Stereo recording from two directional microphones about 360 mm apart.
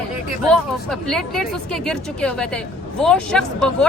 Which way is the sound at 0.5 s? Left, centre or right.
Centre.